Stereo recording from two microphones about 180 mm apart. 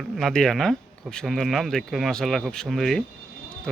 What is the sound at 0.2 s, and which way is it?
Speech, centre (ahead or behind).